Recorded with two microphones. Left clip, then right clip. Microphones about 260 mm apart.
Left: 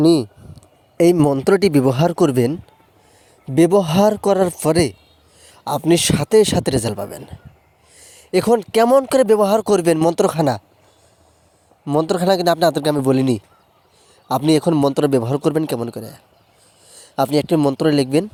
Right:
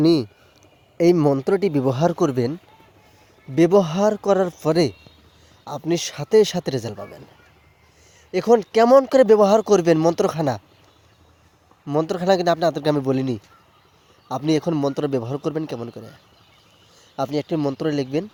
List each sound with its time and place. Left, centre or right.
0.9 s speech: left
11.9 s a man's voice: left